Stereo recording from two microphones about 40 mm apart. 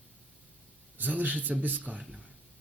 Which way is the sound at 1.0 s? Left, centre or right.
Right.